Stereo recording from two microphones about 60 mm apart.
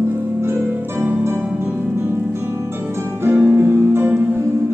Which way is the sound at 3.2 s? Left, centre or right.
Right.